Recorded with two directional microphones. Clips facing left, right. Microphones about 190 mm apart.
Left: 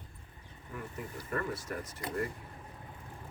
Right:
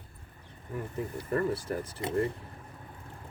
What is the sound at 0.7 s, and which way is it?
Speech, 30° right (ahead or behind).